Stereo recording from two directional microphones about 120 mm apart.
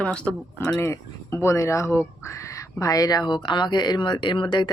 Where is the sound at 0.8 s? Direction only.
20° left (ahead or behind).